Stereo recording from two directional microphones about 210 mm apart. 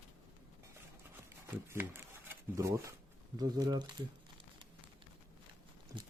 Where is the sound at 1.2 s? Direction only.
10° right (ahead or behind).